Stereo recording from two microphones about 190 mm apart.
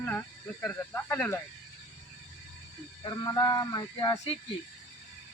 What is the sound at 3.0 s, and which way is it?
Speech, 20° left (ahead or behind).